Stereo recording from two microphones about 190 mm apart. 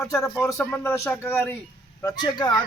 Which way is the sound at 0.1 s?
15° left (ahead or behind).